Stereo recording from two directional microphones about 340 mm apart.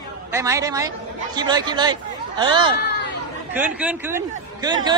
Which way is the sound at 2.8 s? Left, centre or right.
Left.